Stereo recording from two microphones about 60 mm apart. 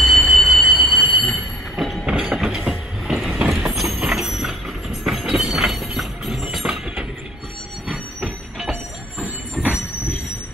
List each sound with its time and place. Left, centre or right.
0.0 s squeal: centre
1.1 s train: centre
2.0 s train: right
2.3 s train: centre
8.2 s train: centre
9.2 s train: right